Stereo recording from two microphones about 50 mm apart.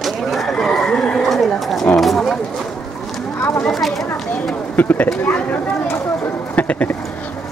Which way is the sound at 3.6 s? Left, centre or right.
Centre.